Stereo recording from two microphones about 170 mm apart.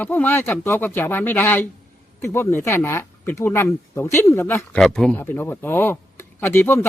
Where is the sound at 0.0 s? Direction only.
10° left (ahead or behind).